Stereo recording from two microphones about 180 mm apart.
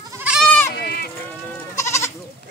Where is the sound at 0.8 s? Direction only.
60° left (ahead or behind).